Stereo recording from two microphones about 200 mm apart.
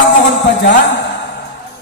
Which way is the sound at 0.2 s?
65° left (ahead or behind).